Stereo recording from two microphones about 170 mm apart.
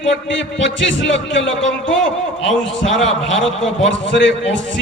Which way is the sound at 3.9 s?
90° left.